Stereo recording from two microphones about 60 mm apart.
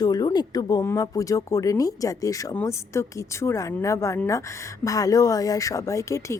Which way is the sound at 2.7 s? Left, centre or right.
Left.